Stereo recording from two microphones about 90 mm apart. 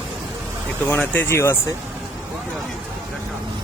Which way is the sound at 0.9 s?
25° left (ahead or behind).